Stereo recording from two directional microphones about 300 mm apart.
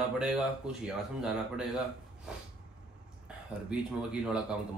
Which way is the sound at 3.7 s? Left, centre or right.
Centre.